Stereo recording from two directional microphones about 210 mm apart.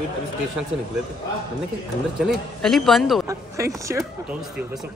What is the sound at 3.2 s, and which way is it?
Speech, 15° right (ahead or behind).